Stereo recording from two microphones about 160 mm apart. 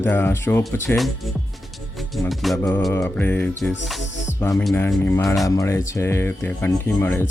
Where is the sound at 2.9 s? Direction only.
20° left (ahead or behind).